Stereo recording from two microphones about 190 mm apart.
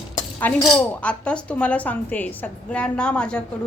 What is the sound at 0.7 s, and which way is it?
Speech, 5° left (ahead or behind).